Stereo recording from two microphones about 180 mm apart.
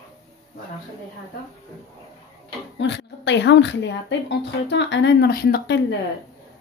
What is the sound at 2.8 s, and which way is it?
Speech, 80° left.